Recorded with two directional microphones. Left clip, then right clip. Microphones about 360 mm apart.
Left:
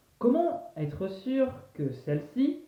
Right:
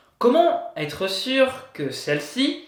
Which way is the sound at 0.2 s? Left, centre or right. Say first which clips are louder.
Right 9 dB; centre.